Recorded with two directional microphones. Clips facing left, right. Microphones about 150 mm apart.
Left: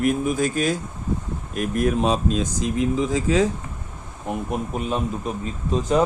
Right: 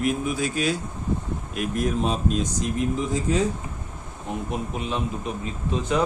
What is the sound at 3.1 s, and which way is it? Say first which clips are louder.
Speech: left 3 dB; 90° left.